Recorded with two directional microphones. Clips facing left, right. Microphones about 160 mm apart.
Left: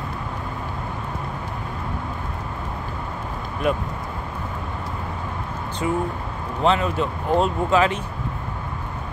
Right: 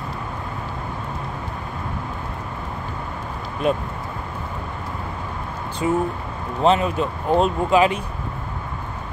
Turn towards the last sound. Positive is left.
turn(degrees=-15)  # may be behind; listen again after turning